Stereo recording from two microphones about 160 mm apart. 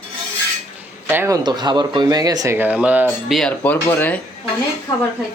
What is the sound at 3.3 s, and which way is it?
Speech, 5° left (ahead or behind).